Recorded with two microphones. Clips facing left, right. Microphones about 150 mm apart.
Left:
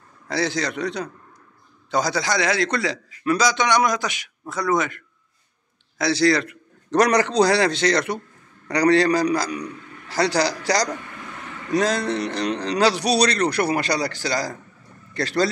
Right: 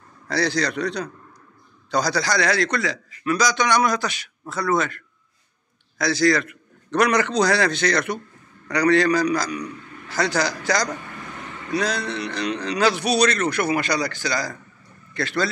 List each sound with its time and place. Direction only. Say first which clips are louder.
0.3 s a man's voice: right 1 dB; 20° left (ahead or behind); by 15.5 s 40° left (ahead or behind)